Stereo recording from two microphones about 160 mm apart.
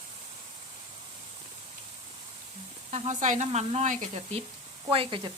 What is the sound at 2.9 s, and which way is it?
Speech, 45° right (ahead or behind).